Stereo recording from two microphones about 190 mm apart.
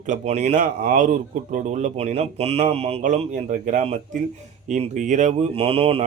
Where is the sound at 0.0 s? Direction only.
40° right (ahead or behind).